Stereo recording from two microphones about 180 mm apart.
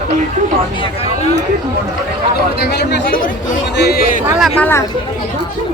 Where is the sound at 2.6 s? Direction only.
70° left (ahead or behind).